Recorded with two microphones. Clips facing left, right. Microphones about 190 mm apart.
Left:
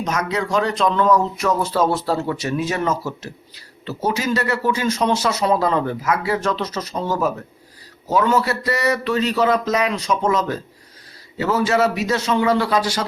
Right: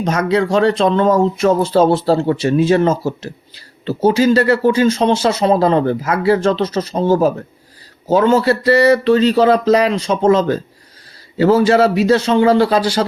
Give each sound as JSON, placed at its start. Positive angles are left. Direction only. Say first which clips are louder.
{"t": 0.0, "sound": "a man's voice", "louder": "right 7 dB", "side_deg": -30}